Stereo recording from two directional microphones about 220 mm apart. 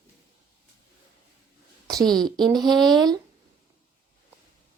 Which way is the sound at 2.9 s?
20° right (ahead or behind).